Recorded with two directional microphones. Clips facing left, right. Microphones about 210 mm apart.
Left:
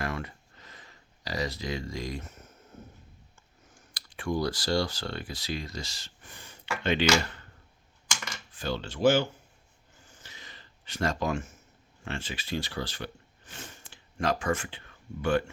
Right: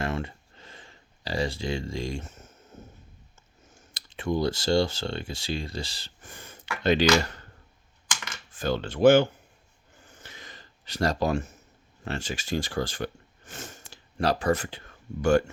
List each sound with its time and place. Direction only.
0.0 s a sound: 25° right (ahead or behind)
3.7 s speech: 25° right (ahead or behind)
6.2 s speech: 50° right (ahead or behind)
8.5 s speech: 50° right (ahead or behind)
10.1 s a sound: 55° right (ahead or behind); by 11.5 s 35° right (ahead or behind)
12.0 s speech: 40° right (ahead or behind)